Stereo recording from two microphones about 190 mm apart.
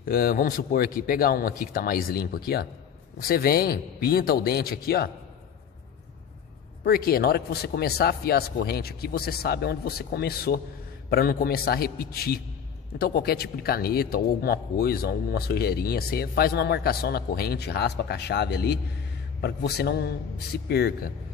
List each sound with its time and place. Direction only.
0.0 s a man's voice: 50° left (ahead or behind)
6.8 s a man's voice: 55° left (ahead or behind)